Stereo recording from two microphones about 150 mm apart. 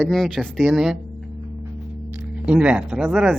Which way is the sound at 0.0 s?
Centre (ahead or behind).